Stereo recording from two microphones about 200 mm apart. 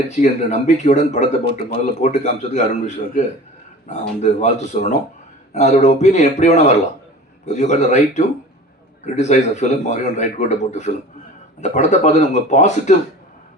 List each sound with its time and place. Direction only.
0.1 s speech: 35° left (ahead or behind)